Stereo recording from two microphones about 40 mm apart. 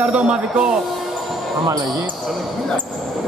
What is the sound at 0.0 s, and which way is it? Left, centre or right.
Speech, right.